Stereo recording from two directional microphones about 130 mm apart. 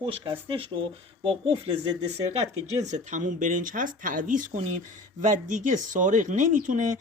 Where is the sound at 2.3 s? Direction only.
60° right (ahead or behind); by 6.9 s 80° right.